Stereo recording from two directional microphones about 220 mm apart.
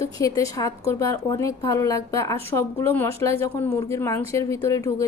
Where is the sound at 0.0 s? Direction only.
15° left (ahead or behind).